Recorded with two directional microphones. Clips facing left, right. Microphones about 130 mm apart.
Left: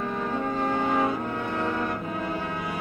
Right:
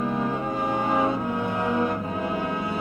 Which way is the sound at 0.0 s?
10° right (ahead or behind).